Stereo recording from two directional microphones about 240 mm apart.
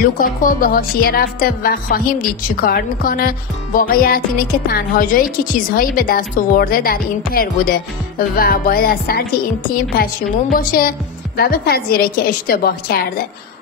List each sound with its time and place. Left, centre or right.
0.0 s speech: left